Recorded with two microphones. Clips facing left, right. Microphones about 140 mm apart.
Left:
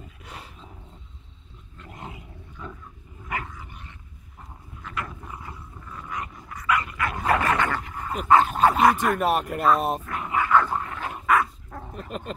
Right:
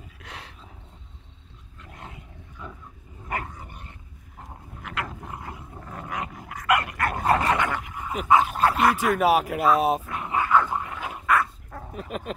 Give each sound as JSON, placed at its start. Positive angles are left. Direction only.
{"t": 0.2, "sound": "dog", "side_deg": 5}
{"t": 1.8, "sound": "dog", "side_deg": 5}
{"t": 3.3, "sound": "dog", "side_deg": -35}
{"t": 5.2, "sound": "dog", "side_deg": -55}
{"t": 7.0, "sound": "dog", "side_deg": -50}
{"t": 7.2, "sound": "dog", "side_deg": -30}
{"t": 7.5, "sound": "dog", "side_deg": -15}
{"t": 8.1, "sound": "speech", "side_deg": -5}
{"t": 10.4, "sound": "dog", "side_deg": -15}